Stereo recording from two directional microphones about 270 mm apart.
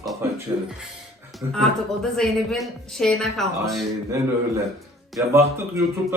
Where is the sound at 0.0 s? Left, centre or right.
Centre.